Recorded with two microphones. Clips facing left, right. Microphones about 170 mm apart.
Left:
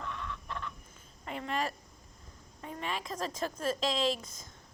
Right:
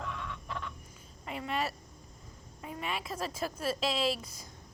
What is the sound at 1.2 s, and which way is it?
A woman's voice, 5° right (ahead or behind).